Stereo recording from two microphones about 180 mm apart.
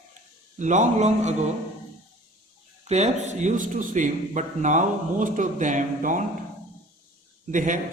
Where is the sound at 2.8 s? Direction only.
40° right (ahead or behind).